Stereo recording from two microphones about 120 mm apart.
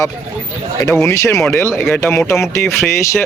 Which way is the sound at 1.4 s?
10° left (ahead or behind).